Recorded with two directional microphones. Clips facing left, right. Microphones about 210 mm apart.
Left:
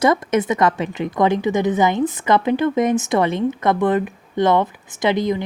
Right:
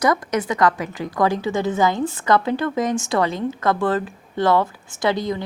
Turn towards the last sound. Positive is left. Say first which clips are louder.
# left 3 dB
turn(degrees=20)  # may be behind; listen again after turning